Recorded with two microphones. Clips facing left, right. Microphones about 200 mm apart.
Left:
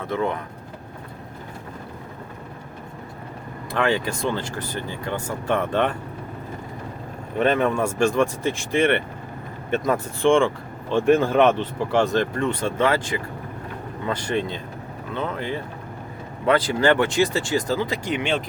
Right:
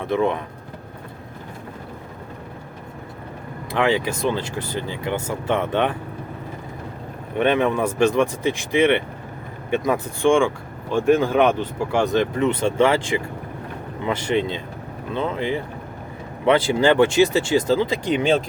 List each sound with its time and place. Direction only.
0.0 s speech: 20° right (ahead or behind)
3.7 s speech: 15° right (ahead or behind)
7.4 s speech: centre (ahead or behind)
7.9 s speech: 20° right (ahead or behind)
10.2 s speech: 15° right (ahead or behind)
16.5 s speech: 25° right (ahead or behind)